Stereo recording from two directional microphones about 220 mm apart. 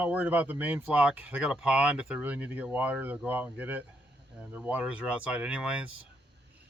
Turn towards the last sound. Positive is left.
turn(degrees=-5)  # may be behind; listen again after turning